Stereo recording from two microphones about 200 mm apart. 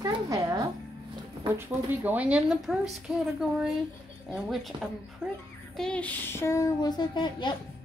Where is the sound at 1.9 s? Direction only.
10° right (ahead or behind).